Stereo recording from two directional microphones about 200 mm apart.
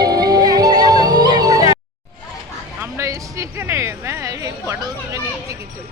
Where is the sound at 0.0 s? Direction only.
20° right (ahead or behind).